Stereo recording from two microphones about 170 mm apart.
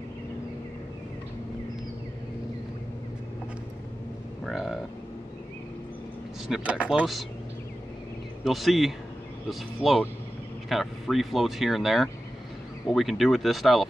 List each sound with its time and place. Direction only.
4.5 s speech: centre (ahead or behind)
6.4 s speech: 5° right (ahead or behind)
8.5 s speech: centre (ahead or behind)